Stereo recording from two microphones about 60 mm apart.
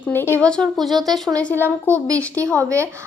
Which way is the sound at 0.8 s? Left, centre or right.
Centre.